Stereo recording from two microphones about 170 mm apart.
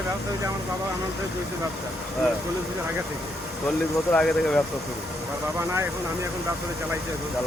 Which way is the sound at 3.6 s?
5° left (ahead or behind).